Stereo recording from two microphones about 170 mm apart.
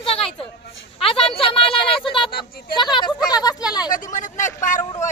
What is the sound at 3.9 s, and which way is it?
Vehicle, 50° left (ahead or behind).